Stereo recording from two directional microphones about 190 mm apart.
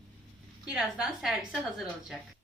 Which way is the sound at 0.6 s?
5° right (ahead or behind).